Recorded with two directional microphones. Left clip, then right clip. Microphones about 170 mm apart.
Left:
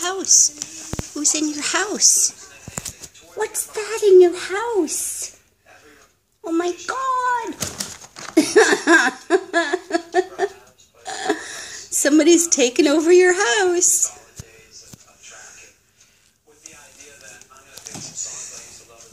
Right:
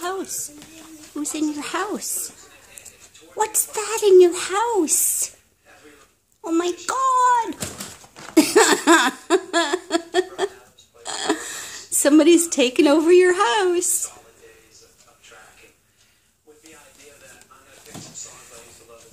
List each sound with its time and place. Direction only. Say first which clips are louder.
0.0 s a sound: left 2 dB; 5° right (ahead or behind)
1.3 s a woman's voice: left 2 dB; 5° right (ahead or behind)
3.3 s a woman's voice: right 2 dB; 10° right (ahead or behind)
6.4 s speech: even; 15° right (ahead or behind)
8.4 s a sound: left 1 dB; 15° right (ahead or behind)
11.1 s speech: left 1 dB; 10° right (ahead or behind)